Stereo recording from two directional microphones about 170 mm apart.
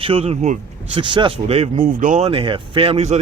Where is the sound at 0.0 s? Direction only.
35° right (ahead or behind).